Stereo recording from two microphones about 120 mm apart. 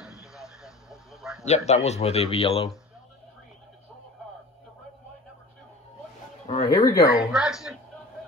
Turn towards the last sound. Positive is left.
turn(degrees=-5)  # may be behind; listen again after turning